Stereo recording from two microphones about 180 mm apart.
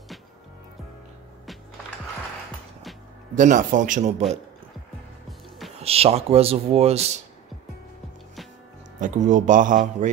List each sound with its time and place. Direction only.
3.3 s speech: 45° right (ahead or behind)
5.8 s speech: 35° right (ahead or behind)
9.0 s speech: 45° right (ahead or behind)